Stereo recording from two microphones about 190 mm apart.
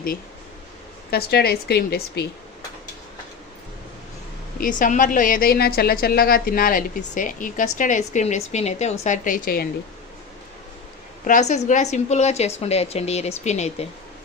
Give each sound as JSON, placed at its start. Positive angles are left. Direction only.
{"t": 1.1, "sound": "speech", "side_deg": 55}
{"t": 4.5, "sound": "a woman's voice", "side_deg": 45}
{"t": 11.3, "sound": "a woman's voice", "side_deg": 40}